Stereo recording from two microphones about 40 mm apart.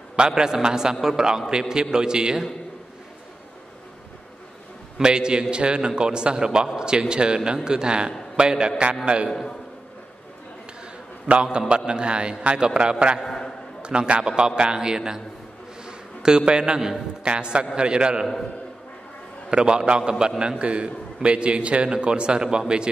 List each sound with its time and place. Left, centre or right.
0.1 s a man's voice: centre
4.9 s a man's voice: right
11.3 s a man's voice: right
13.2 s a man's voice: centre
13.8 s a man's voice: right
15.8 s a sound: centre
17.2 s a man's voice: right
19.5 s a man's voice: right